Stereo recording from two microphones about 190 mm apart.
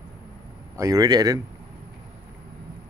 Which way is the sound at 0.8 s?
20° right (ahead or behind).